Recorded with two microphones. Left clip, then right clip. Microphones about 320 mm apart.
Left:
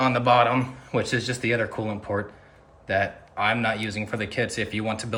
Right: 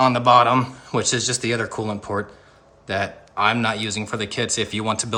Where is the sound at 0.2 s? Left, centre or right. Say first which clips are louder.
Right 4 dB; centre.